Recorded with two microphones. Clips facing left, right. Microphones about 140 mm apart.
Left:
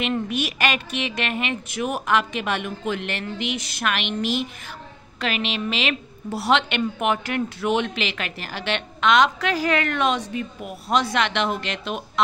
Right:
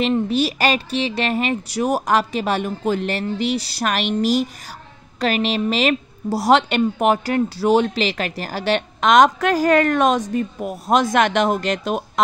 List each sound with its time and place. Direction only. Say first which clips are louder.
0.0 s a woman's voice: right 6 dB; 30° right (ahead or behind)